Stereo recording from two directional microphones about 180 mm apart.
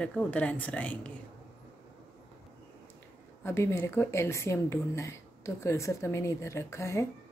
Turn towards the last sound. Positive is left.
turn(degrees=15)  # may be behind; listen again after turning